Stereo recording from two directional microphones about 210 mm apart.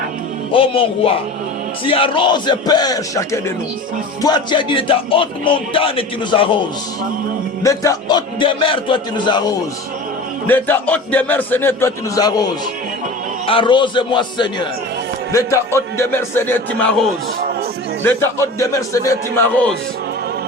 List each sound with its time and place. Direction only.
0.5 s speech: 25° left (ahead or behind)
7.6 s speech: 15° left (ahead or behind)
10.4 s a man's voice: 10° left (ahead or behind)
13.5 s a man's voice: 25° left (ahead or behind)